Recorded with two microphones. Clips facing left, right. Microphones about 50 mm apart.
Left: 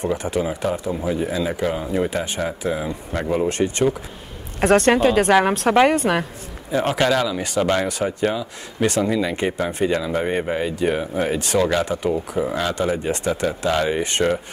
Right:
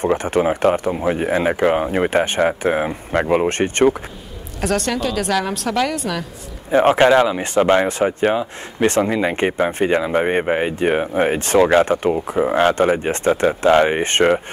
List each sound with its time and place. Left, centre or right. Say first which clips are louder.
0.0 s speech: right 5 dB; right
4.6 s a woman's voice: left 5 dB; left
6.7 s speech: right 7 dB; right